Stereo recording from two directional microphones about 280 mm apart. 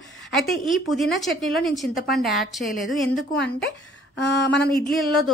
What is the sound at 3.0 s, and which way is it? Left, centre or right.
Speech, left.